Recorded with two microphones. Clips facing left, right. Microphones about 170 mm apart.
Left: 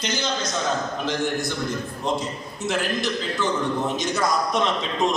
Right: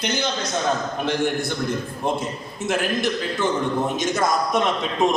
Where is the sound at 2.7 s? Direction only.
50° right (ahead or behind).